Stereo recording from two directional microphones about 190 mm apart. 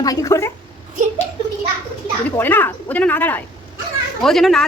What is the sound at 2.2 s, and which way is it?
Speech, 10° left (ahead or behind).